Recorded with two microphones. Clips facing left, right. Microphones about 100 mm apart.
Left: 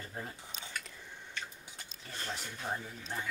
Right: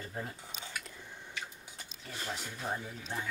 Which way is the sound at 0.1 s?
10° right (ahead or behind).